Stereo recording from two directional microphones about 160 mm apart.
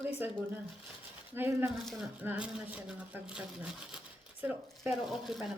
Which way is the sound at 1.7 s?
Centre (ahead or behind).